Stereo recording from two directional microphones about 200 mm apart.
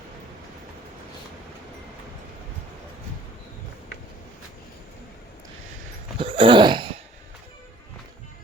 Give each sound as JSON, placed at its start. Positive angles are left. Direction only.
{"t": 6.1, "sound": "laughter", "side_deg": -25}